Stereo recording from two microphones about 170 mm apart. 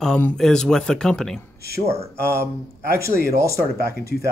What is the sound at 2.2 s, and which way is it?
Speech, 15° right (ahead or behind).